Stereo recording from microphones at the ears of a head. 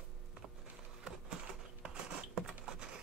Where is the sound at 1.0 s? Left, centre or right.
Right.